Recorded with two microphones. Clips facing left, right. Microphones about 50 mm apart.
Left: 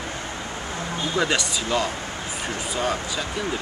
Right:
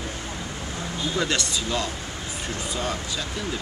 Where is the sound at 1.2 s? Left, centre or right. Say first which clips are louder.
Left 3 dB; centre.